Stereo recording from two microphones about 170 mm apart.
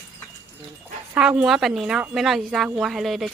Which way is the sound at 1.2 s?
5° right (ahead or behind).